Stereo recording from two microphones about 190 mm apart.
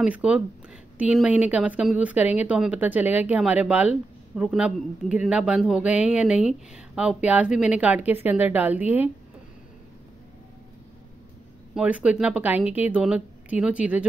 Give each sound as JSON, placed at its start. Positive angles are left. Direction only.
{"t": 0.0, "sound": "a woman's voice", "side_deg": -5}
{"t": 11.7, "sound": "a woman's voice", "side_deg": -5}